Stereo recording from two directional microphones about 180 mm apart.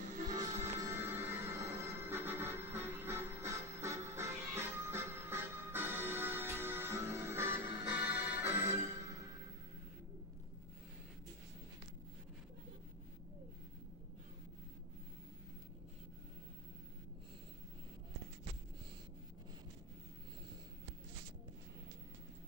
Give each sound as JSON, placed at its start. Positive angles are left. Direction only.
{"t": 0.3, "sound": "music", "side_deg": -20}